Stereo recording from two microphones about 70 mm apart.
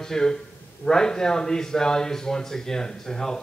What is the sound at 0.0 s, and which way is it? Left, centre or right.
A man's voice, centre.